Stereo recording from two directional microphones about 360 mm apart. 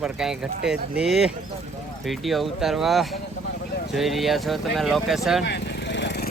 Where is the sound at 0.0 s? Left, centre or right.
Centre.